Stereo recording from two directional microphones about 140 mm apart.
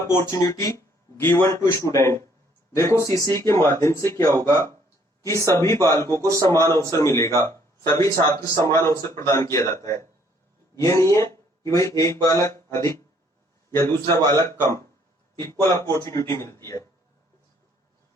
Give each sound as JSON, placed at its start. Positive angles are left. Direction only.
{"t": 0.2, "sound": "speech", "side_deg": 25}
{"t": 15.7, "sound": "speech", "side_deg": 20}